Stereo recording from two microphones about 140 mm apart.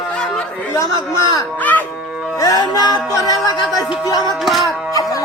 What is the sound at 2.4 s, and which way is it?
A man's voice, 25° left (ahead or behind).